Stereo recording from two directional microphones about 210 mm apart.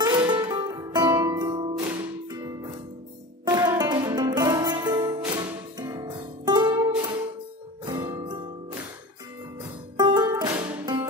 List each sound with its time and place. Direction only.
0.0 s music: 20° right (ahead or behind)